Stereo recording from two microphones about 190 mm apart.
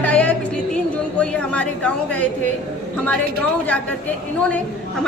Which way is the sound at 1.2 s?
5° left (ahead or behind).